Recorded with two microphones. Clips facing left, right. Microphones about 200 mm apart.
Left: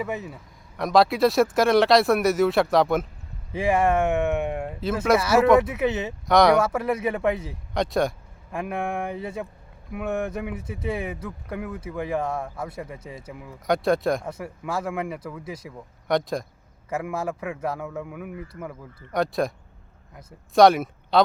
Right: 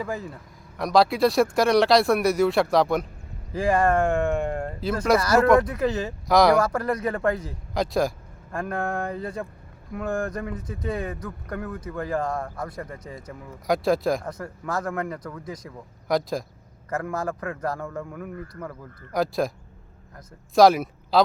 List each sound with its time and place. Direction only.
0.8 s speech: centre (ahead or behind)
20.6 s speech: centre (ahead or behind)